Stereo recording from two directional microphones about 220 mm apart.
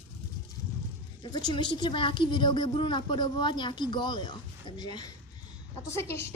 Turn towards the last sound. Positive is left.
turn(degrees=10)  # may be behind; listen again after turning